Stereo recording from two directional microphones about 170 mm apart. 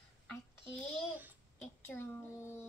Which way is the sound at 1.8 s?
15° left (ahead or behind).